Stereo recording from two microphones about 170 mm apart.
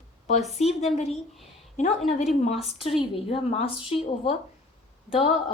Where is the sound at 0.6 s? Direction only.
40° left (ahead or behind).